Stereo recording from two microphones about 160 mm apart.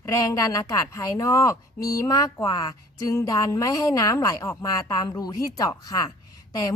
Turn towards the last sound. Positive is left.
turn(degrees=20)  # may be behind; listen again after turning